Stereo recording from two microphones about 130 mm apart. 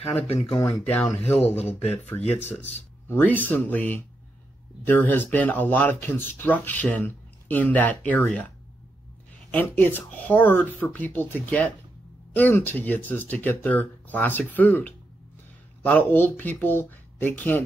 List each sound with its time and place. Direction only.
0.6 s speech: 15° left (ahead or behind)
9.5 s speech: 15° left (ahead or behind)